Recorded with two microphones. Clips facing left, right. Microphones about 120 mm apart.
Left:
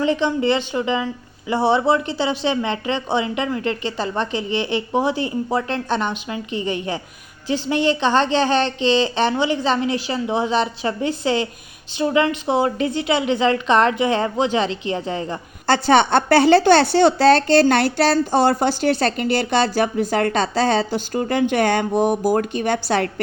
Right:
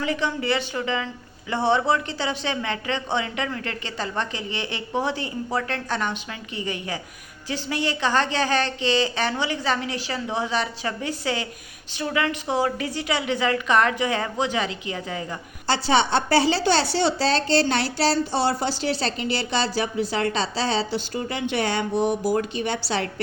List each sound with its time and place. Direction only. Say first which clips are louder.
0.0 s a woman's voice: left 7 dB; 25° left (ahead or behind)
15.6 s a woman's voice: left 6 dB; 55° left (ahead or behind)